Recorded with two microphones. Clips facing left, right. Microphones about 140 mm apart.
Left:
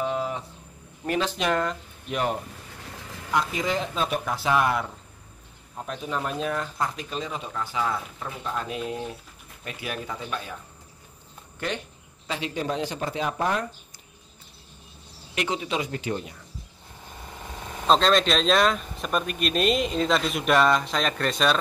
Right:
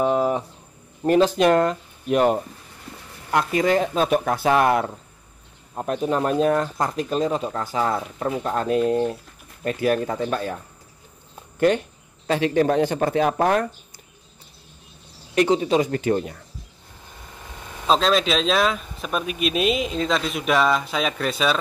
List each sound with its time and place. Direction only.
0.0 s a sound: 50° right (ahead or behind)
1.0 s speech: 40° right (ahead or behind)
3.3 s speech: 55° right (ahead or behind)
11.7 s speech: 50° right (ahead or behind)
12.3 s speech: 60° right (ahead or behind)
15.3 s speech: 35° right (ahead or behind)
17.8 s speech: centre (ahead or behind)